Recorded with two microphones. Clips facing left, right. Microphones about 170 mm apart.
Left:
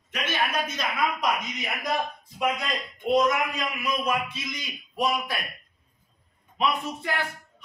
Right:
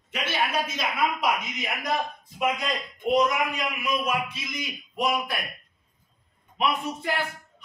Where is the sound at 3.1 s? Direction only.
10° right (ahead or behind).